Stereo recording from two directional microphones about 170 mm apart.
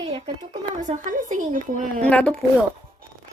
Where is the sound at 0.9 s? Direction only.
50° right (ahead or behind).